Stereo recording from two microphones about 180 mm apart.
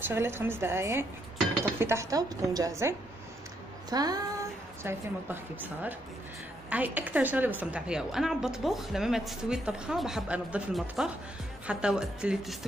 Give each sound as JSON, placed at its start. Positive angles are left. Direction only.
{"t": 0.1, "sound": "a woman's voice", "side_deg": -15}
{"t": 3.9, "sound": "a sound", "side_deg": -20}
{"t": 4.8, "sound": "a woman's voice", "side_deg": -10}